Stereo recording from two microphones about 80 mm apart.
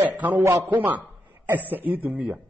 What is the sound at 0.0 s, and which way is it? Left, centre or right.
Speech, right.